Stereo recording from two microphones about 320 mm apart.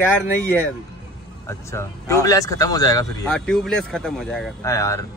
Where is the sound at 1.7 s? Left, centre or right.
Centre.